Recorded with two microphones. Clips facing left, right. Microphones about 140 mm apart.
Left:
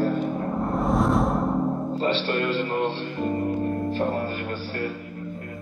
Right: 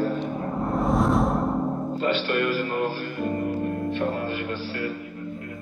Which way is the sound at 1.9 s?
30° left (ahead or behind).